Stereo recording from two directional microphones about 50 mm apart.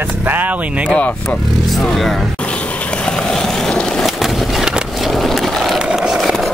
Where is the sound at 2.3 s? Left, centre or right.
Left.